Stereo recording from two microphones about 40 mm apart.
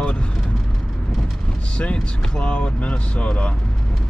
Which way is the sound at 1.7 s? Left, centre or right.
Left.